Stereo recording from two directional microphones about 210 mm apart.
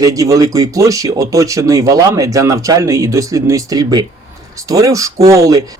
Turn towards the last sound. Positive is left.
turn(degrees=-15)  # may be behind; listen again after turning